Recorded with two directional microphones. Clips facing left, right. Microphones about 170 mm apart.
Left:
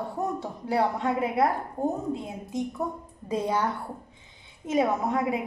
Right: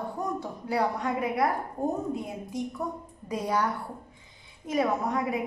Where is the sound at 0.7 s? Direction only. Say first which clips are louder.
Left 2 dB; 25° left (ahead or behind).